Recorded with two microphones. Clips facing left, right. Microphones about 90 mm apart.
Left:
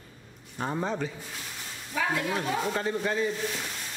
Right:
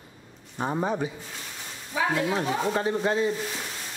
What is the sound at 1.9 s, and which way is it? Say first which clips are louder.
Speech: right 3 dB; 5° right (ahead or behind).